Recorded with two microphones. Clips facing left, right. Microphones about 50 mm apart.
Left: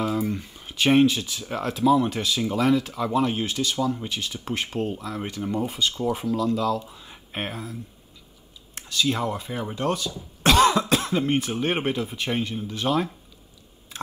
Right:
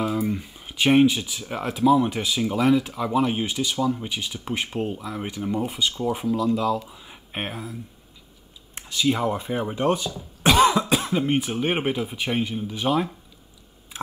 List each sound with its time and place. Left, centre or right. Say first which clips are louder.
0.0 s speech: right 1 dB; centre
8.7 s speech: right 2 dB; right
10.4 s speech: right 1 dB; centre